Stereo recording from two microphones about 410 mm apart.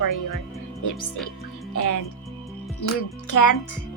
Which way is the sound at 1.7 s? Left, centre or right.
Left.